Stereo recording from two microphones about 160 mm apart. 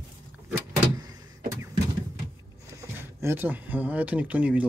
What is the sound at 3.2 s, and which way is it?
Speech, 15° right (ahead or behind).